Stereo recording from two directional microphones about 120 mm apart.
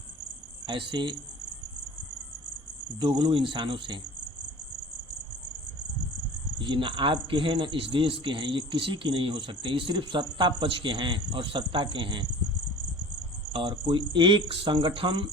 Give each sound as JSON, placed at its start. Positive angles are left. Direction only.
{"t": 0.7, "sound": "speech", "side_deg": -40}
{"t": 3.0, "sound": "speech", "side_deg": -40}
{"t": 6.6, "sound": "speech", "side_deg": -40}
{"t": 13.5, "sound": "speech", "side_deg": -40}